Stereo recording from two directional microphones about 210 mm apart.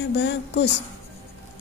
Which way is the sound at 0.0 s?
55° left (ahead or behind).